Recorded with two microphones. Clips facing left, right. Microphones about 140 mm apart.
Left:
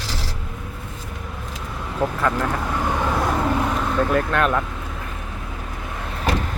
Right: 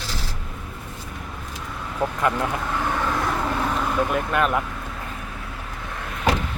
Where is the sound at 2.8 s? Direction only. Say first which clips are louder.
Left 3 dB; 15° left (ahead or behind); by 4.6 s 5° right (ahead or behind).